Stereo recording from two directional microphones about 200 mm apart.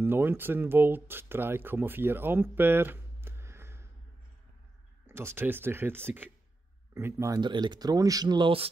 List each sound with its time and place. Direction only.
0.0 s speech: 10° right (ahead or behind)
5.0 s speech: 10° right (ahead or behind)